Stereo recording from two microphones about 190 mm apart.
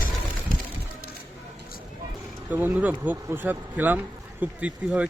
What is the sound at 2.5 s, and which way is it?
Speech, 10° right (ahead or behind).